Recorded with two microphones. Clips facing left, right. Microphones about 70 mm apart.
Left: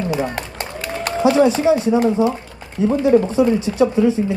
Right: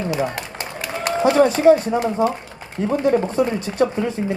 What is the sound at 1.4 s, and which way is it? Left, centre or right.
Speech, right.